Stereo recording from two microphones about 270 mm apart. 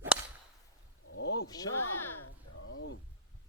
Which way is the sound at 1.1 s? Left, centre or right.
Left.